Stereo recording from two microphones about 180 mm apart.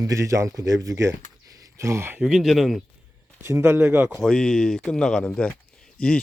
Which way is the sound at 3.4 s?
15° right (ahead or behind).